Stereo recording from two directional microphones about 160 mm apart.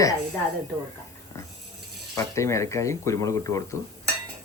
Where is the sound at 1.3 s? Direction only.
15° left (ahead or behind).